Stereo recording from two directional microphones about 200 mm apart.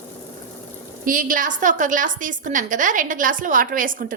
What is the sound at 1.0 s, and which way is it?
A woman's voice, 45° right (ahead or behind).